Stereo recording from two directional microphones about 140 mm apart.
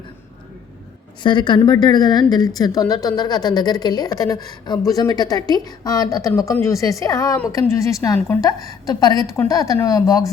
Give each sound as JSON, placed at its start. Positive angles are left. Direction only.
{"t": 1.2, "sound": "a woman's voice", "side_deg": 35}